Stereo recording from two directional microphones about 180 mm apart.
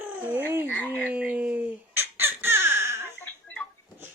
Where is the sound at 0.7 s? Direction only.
10° left (ahead or behind).